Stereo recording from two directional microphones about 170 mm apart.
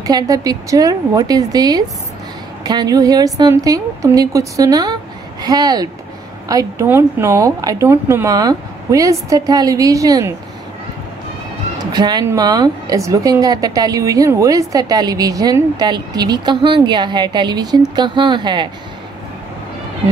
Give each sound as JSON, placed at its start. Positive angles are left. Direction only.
{"t": 0.0, "sound": "a woman's voice", "side_deg": -20}
{"t": 11.9, "sound": "a woman's voice", "side_deg": -25}